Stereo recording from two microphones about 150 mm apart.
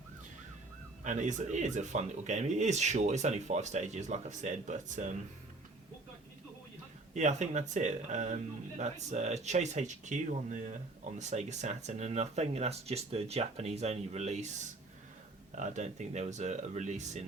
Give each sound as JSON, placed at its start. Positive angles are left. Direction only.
{"t": 1.0, "sound": "speech", "side_deg": -55}
{"t": 7.1, "sound": "speech", "side_deg": -50}
{"t": 15.5, "sound": "speech", "side_deg": -55}